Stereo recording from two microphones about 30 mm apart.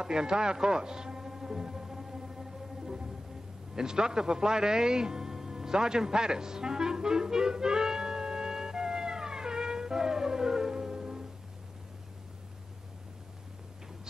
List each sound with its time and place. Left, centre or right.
0.0 s music: right